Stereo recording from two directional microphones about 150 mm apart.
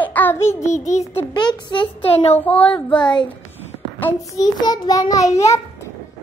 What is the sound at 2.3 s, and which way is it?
Child singing, 10° left (ahead or behind).